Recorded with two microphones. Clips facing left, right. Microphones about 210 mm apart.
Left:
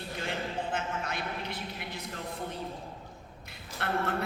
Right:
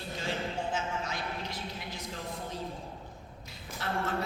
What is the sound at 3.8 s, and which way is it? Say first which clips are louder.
Speech: left 3 dB; 60° left (ahead or behind).